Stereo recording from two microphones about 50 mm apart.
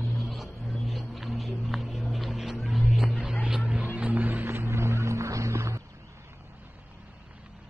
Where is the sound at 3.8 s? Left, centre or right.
Right.